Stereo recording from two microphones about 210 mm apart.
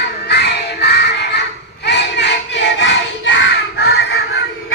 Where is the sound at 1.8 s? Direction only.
55° left (ahead or behind).